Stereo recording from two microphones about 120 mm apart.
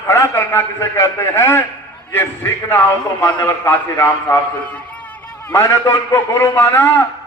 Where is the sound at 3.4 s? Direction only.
15° left (ahead or behind).